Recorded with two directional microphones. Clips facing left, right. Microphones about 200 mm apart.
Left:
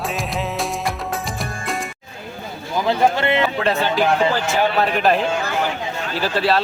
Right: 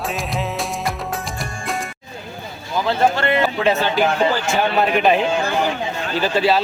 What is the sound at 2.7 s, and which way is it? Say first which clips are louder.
Speech: even; 15° left (ahead or behind).